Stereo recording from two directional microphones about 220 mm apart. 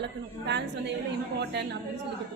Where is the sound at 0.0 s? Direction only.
50° right (ahead or behind).